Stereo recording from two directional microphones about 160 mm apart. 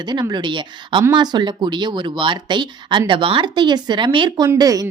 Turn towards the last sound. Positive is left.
turn(degrees=-20)  # may be behind; listen again after turning